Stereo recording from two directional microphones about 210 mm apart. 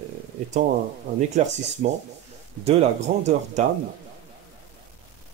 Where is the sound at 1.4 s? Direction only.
35° right (ahead or behind).